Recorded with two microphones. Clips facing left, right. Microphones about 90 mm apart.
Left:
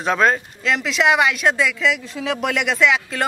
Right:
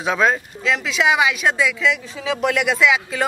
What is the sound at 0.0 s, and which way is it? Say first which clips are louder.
Speech: left 1 dB; centre (ahead or behind).